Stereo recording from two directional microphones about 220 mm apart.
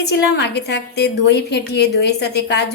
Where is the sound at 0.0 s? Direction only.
50° left (ahead or behind).